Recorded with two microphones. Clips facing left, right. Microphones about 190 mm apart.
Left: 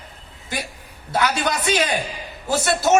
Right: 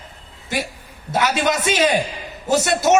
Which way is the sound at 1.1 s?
20° right (ahead or behind).